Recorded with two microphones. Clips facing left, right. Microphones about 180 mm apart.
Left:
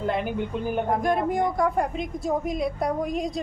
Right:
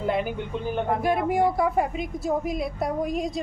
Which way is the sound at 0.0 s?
5° right (ahead or behind).